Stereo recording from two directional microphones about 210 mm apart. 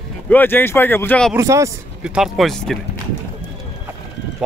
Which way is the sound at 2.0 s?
Centre (ahead or behind).